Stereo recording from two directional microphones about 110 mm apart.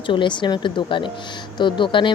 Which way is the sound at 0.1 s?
45° left (ahead or behind).